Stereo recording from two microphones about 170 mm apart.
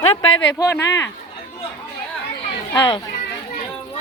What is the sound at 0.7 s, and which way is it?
Speech, 15° left (ahead or behind).